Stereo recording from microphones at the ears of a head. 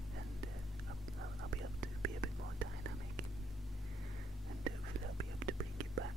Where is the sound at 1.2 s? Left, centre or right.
Right.